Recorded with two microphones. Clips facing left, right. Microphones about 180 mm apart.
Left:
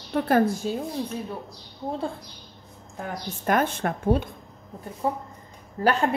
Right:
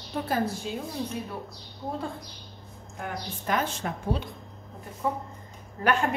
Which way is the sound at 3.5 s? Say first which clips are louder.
Left 5 dB; 55° left (ahead or behind).